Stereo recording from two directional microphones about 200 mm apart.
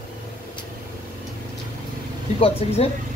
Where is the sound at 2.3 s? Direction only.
30° left (ahead or behind).